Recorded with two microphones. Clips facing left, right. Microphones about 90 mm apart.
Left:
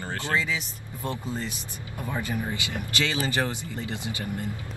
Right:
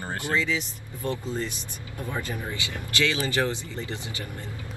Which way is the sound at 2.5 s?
20° left (ahead or behind).